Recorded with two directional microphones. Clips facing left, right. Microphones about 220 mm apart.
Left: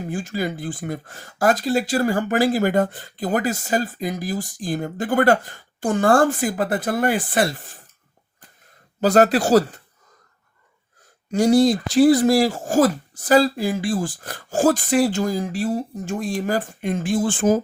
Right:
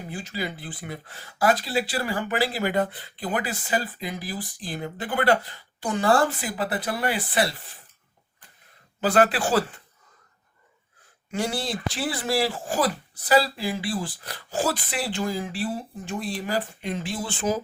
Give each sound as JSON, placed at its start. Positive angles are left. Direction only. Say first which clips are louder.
{"t": 0.0, "sound": "speech", "louder": "left 7 dB", "side_deg": 45}
{"t": 9.0, "sound": "speech", "louder": "left 5 dB", "side_deg": 40}
{"t": 11.3, "sound": "speech", "louder": "left 13 dB", "side_deg": 40}